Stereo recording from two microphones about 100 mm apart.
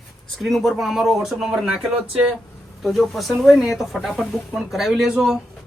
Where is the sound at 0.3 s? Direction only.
Centre (ahead or behind).